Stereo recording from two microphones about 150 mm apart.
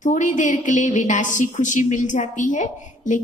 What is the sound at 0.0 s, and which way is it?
A woman's voice, 55° left (ahead or behind).